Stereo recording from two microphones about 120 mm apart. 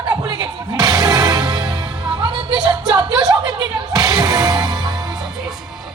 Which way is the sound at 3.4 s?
35° right (ahead or behind).